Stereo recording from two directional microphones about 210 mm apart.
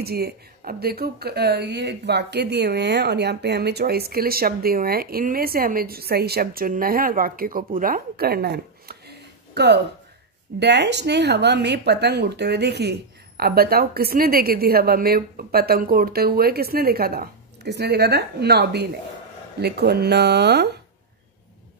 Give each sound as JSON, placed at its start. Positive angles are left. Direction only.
{"t": 0.0, "sound": "speech", "side_deg": -50}